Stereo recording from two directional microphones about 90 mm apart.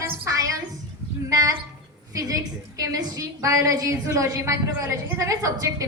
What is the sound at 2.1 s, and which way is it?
A woman's voice, 40° right (ahead or behind).